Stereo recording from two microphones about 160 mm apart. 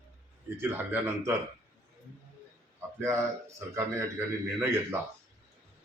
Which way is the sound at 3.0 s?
20° right (ahead or behind).